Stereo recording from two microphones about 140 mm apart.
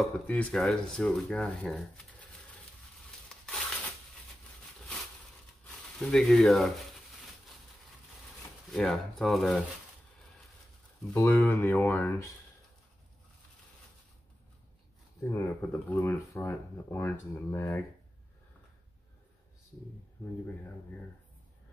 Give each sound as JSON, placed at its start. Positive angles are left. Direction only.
{"t": 0.0, "sound": "speech", "side_deg": 5}
{"t": 3.4, "sound": "a sound", "side_deg": 10}
{"t": 5.9, "sound": "speech", "side_deg": 5}
{"t": 8.7, "sound": "speech", "side_deg": 5}
{"t": 11.1, "sound": "speech", "side_deg": 15}
{"t": 15.3, "sound": "speech", "side_deg": 20}